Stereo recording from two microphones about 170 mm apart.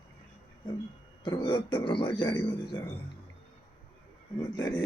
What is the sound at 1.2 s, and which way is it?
A man's voice, 25° left (ahead or behind).